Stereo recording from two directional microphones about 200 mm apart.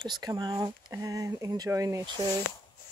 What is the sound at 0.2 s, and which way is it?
Speech, 20° right (ahead or behind).